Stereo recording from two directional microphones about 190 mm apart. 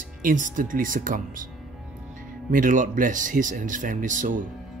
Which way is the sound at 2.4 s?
45° right (ahead or behind).